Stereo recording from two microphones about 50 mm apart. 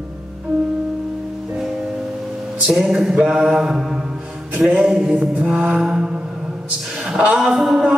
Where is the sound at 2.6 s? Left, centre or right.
Centre.